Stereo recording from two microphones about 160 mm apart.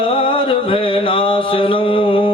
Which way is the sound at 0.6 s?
35° left (ahead or behind).